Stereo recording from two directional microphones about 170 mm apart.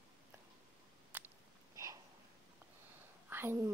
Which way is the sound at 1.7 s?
20° right (ahead or behind).